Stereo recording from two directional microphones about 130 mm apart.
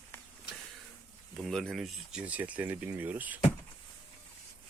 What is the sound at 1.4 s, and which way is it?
Speech, 5° left (ahead or behind).